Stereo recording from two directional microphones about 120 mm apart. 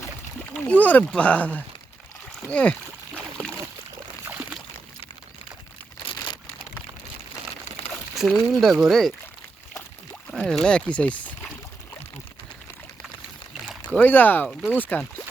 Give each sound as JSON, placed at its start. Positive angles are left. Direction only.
{"t": 0.5, "sound": "speech", "side_deg": 10}
{"t": 4.3, "sound": "a sound", "side_deg": -10}
{"t": 6.1, "sound": "crumpling", "side_deg": 35}
{"t": 8.1, "sound": "a sound", "side_deg": 0}
{"t": 8.6, "sound": "speech", "side_deg": 0}
{"t": 10.3, "sound": "speech", "side_deg": 5}
{"t": 13.8, "sound": "speech", "side_deg": 15}